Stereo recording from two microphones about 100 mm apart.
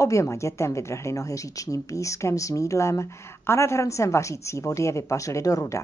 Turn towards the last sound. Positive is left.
turn(degrees=35)  # may be behind; listen again after turning